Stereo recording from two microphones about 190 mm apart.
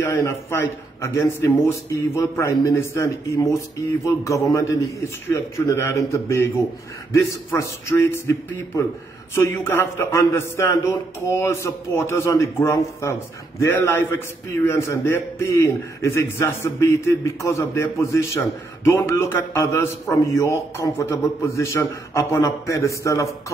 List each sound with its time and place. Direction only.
0.0 s a man's voice: 15° left (ahead or behind)
7.5 s a man's voice: 15° left (ahead or behind)